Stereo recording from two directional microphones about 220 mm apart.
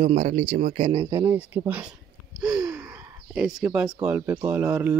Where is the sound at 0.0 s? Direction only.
35° right (ahead or behind).